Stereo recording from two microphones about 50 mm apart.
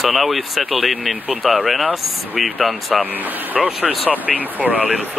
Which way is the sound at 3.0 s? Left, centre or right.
Right.